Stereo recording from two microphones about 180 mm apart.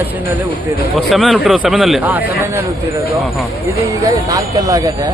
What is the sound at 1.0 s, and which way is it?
Speech, centre (ahead or behind).